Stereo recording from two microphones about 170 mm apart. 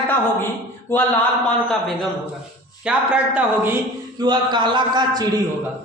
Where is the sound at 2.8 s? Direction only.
5° right (ahead or behind).